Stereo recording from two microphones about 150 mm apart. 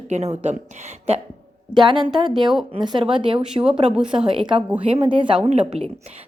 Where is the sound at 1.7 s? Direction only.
35° right (ahead or behind).